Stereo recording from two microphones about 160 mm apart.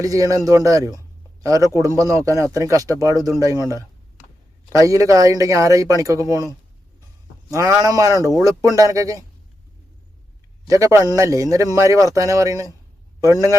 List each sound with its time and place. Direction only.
0.0 s a man's voice: 20° right (ahead or behind)
7.5 s a man's voice: 20° right (ahead or behind)
10.7 s a man's voice: 20° right (ahead or behind)